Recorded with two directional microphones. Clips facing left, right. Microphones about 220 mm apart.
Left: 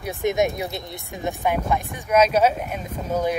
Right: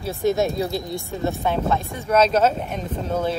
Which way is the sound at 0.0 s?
15° left (ahead or behind).